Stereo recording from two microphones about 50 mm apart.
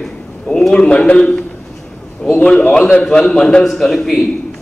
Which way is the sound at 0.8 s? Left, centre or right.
Left.